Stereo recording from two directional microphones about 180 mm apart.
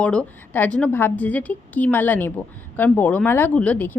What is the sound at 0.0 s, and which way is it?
Speech, 5° left (ahead or behind).